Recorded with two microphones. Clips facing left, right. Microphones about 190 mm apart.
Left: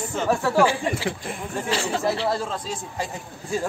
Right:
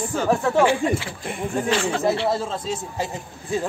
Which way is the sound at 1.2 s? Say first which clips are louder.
Right 4 dB; centre (ahead or behind).